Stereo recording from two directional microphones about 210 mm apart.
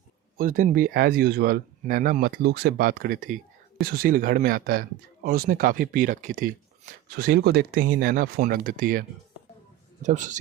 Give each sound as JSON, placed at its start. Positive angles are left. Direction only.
{"t": 0.3, "sound": "speech", "side_deg": -40}